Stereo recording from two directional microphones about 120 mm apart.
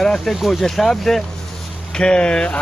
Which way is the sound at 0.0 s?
5° left (ahead or behind).